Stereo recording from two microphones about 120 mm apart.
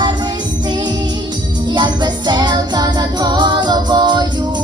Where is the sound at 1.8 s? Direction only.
40° right (ahead or behind).